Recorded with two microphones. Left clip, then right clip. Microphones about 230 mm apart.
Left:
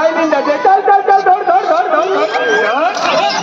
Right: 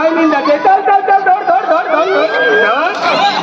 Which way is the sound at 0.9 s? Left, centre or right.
Left.